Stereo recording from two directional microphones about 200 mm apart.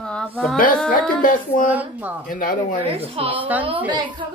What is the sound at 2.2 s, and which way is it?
Speech, 45° left (ahead or behind).